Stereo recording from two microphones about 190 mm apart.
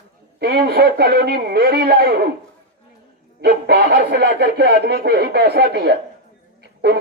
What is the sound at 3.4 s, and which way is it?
Speech, 60° right (ahead or behind).